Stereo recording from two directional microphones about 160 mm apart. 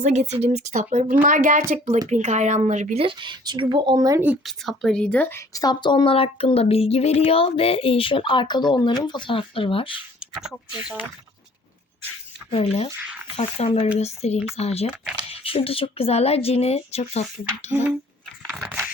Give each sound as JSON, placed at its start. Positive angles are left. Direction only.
{"t": 0.0, "sound": "a woman's voice", "side_deg": -45}
{"t": 4.4, "sound": "speech", "side_deg": 0}
{"t": 10.2, "sound": "speech", "side_deg": 0}
{"t": 12.5, "sound": "speech", "side_deg": 40}
{"t": 18.4, "sound": "a sound", "side_deg": 0}